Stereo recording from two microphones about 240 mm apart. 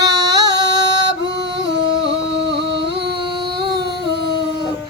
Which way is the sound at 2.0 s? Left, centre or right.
Right.